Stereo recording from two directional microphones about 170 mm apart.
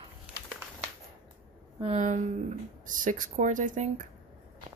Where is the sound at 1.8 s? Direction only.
40° right (ahead or behind).